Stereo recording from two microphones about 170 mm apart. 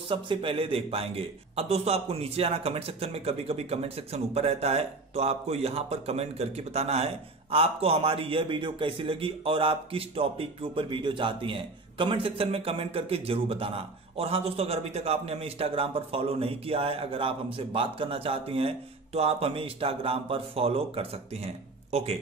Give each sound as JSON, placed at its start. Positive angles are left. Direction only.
{"t": 0.1, "sound": "a man's voice", "side_deg": -30}